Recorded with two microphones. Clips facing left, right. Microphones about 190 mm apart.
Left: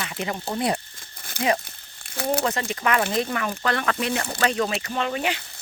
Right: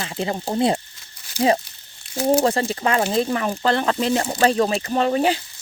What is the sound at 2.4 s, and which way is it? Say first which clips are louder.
Speech: right 5 dB; 30° right (ahead or behind).